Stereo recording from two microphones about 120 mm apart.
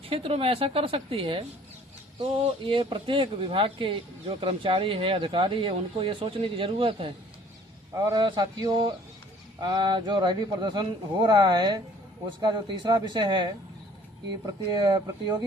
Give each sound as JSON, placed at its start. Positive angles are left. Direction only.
{"t": 0.1, "sound": "speech", "side_deg": -50}
{"t": 8.1, "sound": "speech", "side_deg": -35}
{"t": 14.7, "sound": "speech", "side_deg": -35}